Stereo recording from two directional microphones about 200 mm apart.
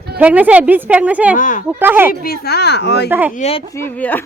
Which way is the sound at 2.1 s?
50° left (ahead or behind).